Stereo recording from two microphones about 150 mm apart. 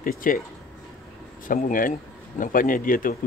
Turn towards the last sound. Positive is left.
turn(degrees=65)  # may be behind; listen again after turning